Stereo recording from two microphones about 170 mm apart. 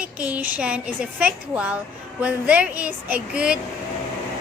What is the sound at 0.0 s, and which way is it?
A woman's voice, 10° right (ahead or behind).